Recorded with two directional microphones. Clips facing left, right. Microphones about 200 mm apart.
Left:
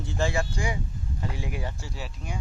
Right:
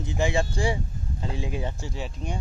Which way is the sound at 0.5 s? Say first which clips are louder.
Right 4 dB; 30° right (ahead or behind).